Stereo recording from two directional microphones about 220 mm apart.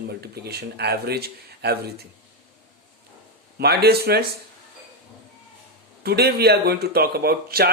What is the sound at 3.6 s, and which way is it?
Speech, 45° right (ahead or behind).